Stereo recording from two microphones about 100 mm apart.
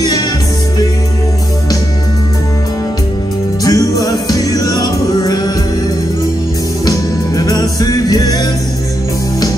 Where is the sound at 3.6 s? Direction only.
40° left (ahead or behind).